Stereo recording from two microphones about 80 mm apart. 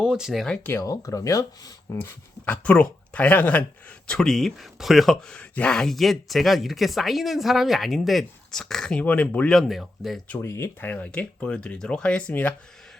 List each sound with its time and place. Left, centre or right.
0.0 s speech: centre
0.8 s speech: left
2.5 s speech: centre
5.4 s speech: centre
5.7 s a woman's voice: centre
9.5 s a woman's voice: centre
10.4 s speech: left
10.8 s speech: centre